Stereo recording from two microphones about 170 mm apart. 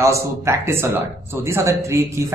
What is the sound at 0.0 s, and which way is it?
A man's voice, 15° right (ahead or behind).